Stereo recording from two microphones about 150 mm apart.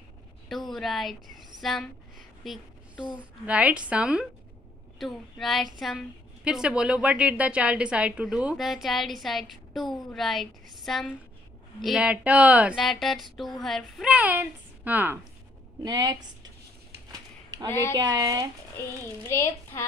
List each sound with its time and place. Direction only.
0.5 s a woman's voice: centre (ahead or behind)
15.8 s speech: 25° right (ahead or behind)
17.6 s a child's voice: 15° left (ahead or behind)
17.9 s speech: 25° right (ahead or behind)
18.8 s a child's voice: 15° left (ahead or behind)